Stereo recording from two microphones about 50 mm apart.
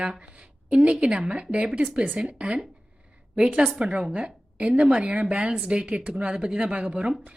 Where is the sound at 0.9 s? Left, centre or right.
Centre.